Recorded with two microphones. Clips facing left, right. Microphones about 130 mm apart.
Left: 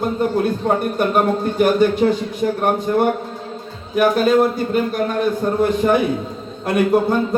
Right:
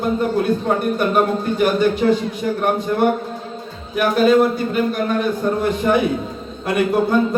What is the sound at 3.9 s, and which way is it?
Speech, 45° left (ahead or behind).